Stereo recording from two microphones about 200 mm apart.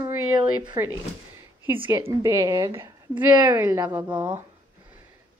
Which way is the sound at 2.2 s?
15° right (ahead or behind).